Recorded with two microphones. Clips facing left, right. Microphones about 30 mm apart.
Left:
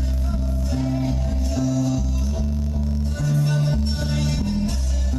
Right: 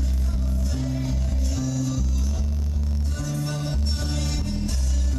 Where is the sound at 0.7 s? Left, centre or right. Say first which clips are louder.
Left 6 dB; centre.